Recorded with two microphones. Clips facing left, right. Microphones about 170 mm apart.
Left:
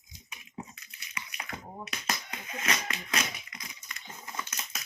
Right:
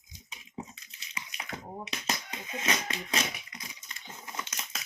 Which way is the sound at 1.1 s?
25° right (ahead or behind).